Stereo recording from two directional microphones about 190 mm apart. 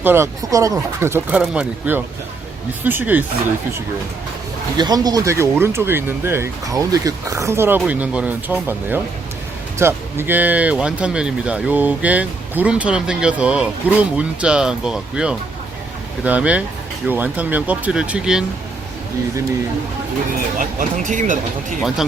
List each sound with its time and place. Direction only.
0.0 s speech: 10° right (ahead or behind)
4.8 s speech: 20° right (ahead or behind); by 18.4 s 5° right (ahead or behind)
20.6 s speech: 45° right (ahead or behind)
21.8 s speech: centre (ahead or behind)